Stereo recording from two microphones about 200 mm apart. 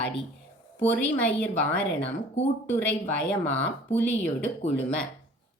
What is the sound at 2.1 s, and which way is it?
Speech, 35° left (ahead or behind).